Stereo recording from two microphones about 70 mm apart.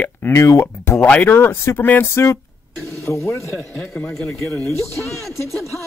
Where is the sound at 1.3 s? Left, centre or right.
Left.